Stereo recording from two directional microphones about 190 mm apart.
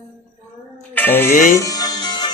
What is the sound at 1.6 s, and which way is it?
Music, 20° left (ahead or behind).